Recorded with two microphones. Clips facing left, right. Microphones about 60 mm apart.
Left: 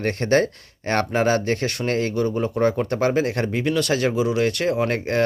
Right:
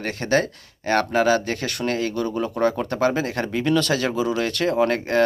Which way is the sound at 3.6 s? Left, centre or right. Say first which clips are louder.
Right 1 dB; left.